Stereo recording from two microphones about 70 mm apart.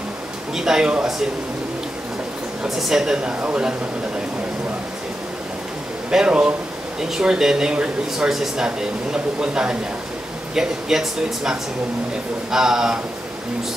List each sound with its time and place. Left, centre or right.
0.6 s speech: centre
2.6 s speech: centre
6.0 s speech: centre